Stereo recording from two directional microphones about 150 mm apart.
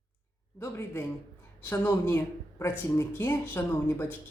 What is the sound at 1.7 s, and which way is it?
Speech, 10° left (ahead or behind).